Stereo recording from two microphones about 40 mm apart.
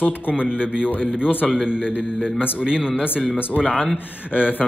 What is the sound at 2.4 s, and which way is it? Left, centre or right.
Speech, right.